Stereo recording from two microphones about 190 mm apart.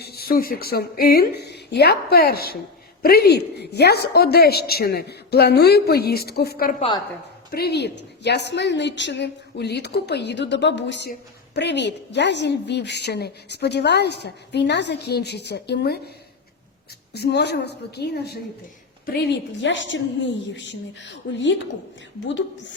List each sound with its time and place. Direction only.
0.0 s a woman's voice: 55° left (ahead or behind)
6.7 s a woman's voice: 30° left (ahead or behind)
7.5 s a woman's voice: 55° left (ahead or behind)
17.1 s a woman's voice: 60° left (ahead or behind)
19.6 s a woman's voice: 75° left (ahead or behind)